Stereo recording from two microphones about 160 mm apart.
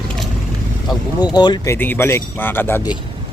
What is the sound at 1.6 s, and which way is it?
Speech, 15° left (ahead or behind).